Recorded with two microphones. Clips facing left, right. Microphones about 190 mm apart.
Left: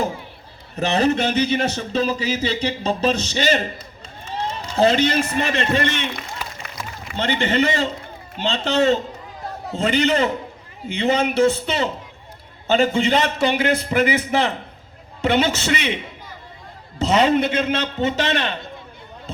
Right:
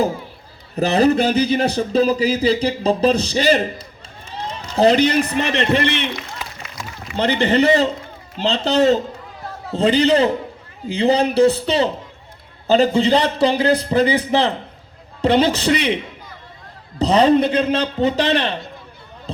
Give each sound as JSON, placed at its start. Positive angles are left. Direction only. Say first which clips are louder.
{"t": 0.8, "sound": "speech", "louder": "right 4 dB", "side_deg": -35}
{"t": 7.2, "sound": "speech", "louder": "right 4 dB", "side_deg": -35}
{"t": 17.0, "sound": "speech", "louder": "right 3 dB", "side_deg": -35}